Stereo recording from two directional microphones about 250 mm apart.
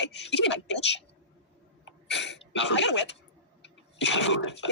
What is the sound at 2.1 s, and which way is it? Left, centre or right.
Speech, left.